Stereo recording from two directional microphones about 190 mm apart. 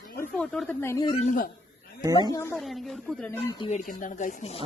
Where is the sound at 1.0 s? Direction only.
35° left (ahead or behind).